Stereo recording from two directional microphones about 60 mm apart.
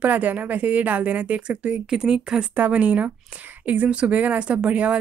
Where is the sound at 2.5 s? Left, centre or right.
Right.